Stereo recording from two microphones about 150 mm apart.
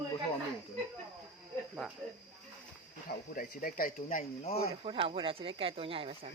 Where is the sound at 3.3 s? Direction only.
70° left (ahead or behind); by 4.5 s 55° left (ahead or behind).